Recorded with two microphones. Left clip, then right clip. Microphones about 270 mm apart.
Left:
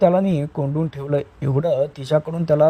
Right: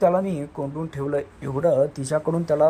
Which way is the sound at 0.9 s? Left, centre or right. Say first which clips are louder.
Left 3 dB; left.